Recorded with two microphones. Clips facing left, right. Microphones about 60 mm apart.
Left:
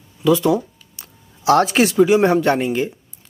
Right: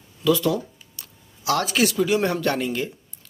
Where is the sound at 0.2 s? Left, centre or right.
Left.